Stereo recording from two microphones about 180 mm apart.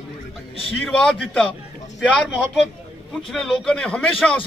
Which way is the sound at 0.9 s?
5° left (ahead or behind).